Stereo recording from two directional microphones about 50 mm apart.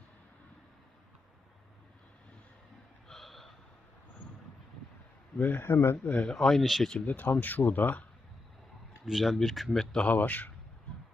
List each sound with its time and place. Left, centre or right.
3.1 s a sound: centre
5.4 s speech: left
5.6 s speech: left
6.3 s speech: centre
7.0 s speech: left
9.0 s speech: centre
10.1 s speech: left